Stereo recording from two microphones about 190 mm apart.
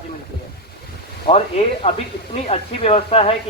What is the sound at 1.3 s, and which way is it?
Speech, 30° left (ahead or behind).